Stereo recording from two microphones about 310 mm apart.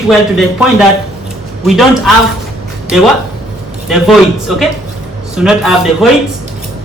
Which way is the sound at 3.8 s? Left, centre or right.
Centre.